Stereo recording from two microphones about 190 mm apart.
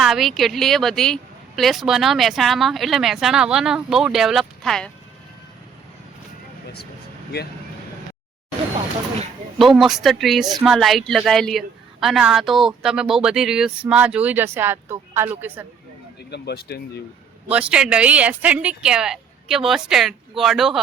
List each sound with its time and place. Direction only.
0.0 s a woman's voice: centre (ahead or behind)
9.6 s a woman's voice: centre (ahead or behind)
16.3 s speech: 60° left (ahead or behind)
17.5 s a woman's voice: 5° right (ahead or behind)